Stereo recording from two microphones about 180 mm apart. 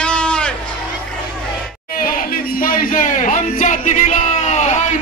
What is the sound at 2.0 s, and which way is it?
Speech, 50° left (ahead or behind).